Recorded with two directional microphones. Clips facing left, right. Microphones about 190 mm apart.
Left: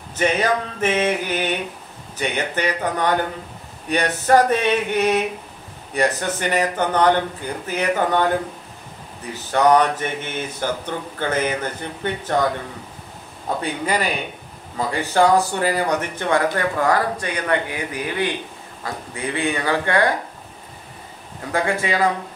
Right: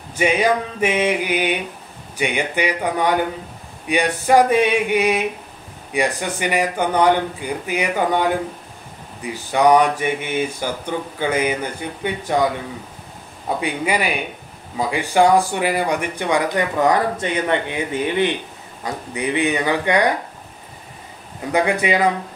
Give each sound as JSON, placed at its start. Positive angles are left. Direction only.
{"t": 0.1, "sound": "speech", "side_deg": -10}
{"t": 13.6, "sound": "speech", "side_deg": -10}
{"t": 21.5, "sound": "speech", "side_deg": -20}